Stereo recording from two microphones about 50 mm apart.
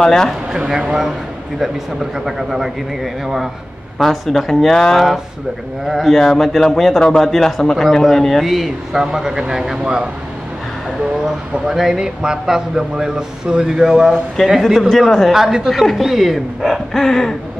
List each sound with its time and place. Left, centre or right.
0.0 s a sound: centre
0.7 s speech: centre
2.2 s a man's voice: centre
4.0 s a man's voice: centre
11.6 s speech: centre
14.7 s a man's voice: centre
15.3 s speech: centre
15.7 s a man's voice: centre
17.0 s a sound: centre